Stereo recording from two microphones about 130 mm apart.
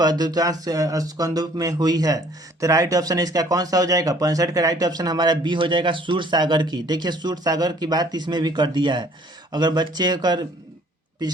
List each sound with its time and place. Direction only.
0.0 s speech: 30° right (ahead or behind)